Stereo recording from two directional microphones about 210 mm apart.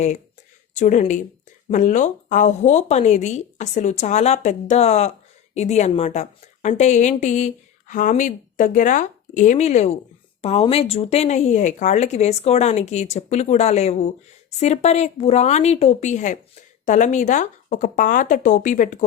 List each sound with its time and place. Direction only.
0.7 s a woman's voice: 35° left (ahead or behind)